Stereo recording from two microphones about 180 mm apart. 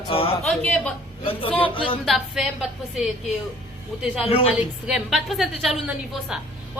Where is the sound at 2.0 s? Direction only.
Centre (ahead or behind).